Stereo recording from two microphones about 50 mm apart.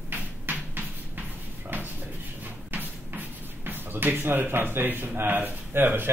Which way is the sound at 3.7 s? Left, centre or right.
Right.